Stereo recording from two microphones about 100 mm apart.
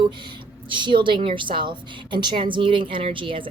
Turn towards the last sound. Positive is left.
turn(degrees=-60)  # may be behind; listen again after turning